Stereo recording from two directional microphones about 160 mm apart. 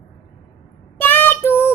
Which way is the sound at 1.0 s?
15° left (ahead or behind).